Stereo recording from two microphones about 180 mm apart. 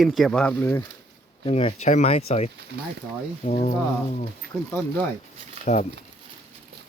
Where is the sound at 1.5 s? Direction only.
30° left (ahead or behind).